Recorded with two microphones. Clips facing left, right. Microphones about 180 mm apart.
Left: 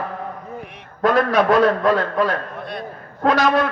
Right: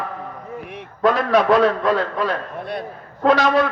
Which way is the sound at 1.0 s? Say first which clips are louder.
Even; 45° left (ahead or behind).